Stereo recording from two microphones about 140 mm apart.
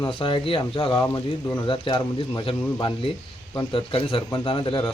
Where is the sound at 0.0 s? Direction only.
35° left (ahead or behind).